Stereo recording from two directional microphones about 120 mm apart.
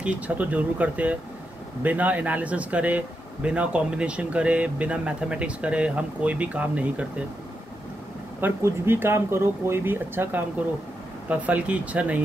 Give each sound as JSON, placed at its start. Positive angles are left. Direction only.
{"t": 0.0, "sound": "speech", "side_deg": -10}
{"t": 8.4, "sound": "speech", "side_deg": -20}